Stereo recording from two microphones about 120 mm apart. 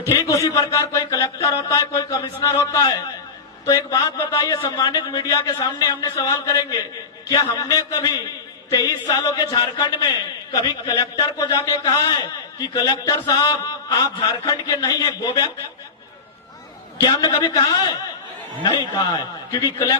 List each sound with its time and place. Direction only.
0.0 s a man's voice: 25° left (ahead or behind)
17.0 s a man's voice: 35° left (ahead or behind)
18.6 s a man's voice: 40° left (ahead or behind)